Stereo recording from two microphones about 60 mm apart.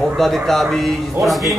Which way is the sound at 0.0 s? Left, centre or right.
Centre.